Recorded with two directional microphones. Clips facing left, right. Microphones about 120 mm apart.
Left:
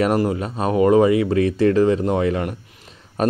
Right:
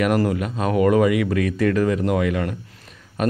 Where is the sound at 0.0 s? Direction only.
25° left (ahead or behind).